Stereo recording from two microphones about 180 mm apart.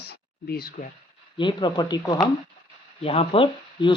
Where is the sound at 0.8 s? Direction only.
45° left (ahead or behind).